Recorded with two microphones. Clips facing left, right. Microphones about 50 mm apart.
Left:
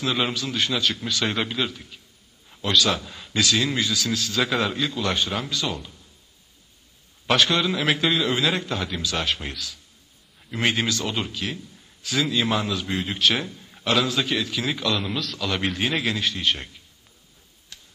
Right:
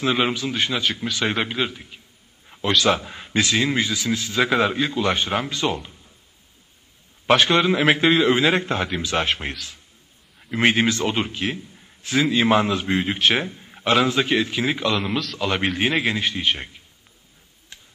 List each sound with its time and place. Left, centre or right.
0.0 s a man's voice: right
7.2 s a man's voice: right
15.0 s a man's voice: centre
15.3 s a man's voice: right
17.7 s tick-tock: right